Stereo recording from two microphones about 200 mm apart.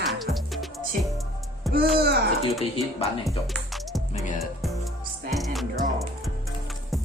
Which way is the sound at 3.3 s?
Centre (ahead or behind).